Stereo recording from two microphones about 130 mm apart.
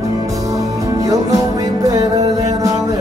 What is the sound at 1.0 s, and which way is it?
Music, 25° right (ahead or behind).